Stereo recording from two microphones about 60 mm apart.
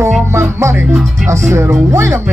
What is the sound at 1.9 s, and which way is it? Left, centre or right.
Speech, right.